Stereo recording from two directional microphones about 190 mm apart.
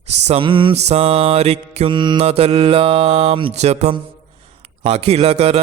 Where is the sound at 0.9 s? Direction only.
35° right (ahead or behind).